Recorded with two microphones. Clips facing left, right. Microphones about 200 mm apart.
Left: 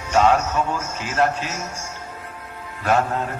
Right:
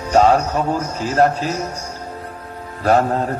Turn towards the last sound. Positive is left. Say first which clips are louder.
# right 5 dB
turn(degrees=-35)  # may be behind; listen again after turning